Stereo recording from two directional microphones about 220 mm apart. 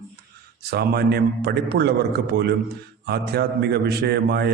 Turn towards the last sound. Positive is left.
turn(degrees=-45)  # may be behind; listen again after turning